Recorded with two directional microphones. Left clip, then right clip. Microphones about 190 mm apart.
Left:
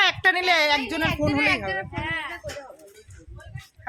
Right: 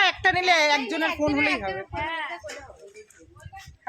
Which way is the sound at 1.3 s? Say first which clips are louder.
Left 4 dB; 35° left (ahead or behind).